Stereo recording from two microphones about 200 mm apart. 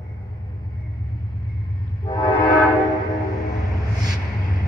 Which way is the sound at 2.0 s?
20° left (ahead or behind).